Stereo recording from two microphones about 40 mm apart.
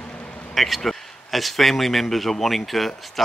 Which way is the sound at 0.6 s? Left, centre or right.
Centre.